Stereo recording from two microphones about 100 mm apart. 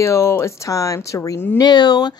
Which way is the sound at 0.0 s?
25° left (ahead or behind).